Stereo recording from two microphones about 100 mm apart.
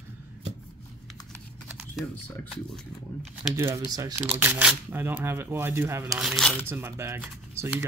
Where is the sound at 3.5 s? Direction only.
30° right (ahead or behind).